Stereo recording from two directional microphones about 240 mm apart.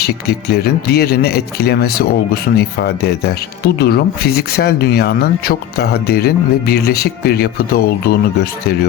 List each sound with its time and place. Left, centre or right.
0.0 s speech: left